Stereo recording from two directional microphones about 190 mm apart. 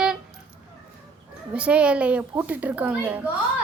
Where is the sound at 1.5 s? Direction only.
5° right (ahead or behind).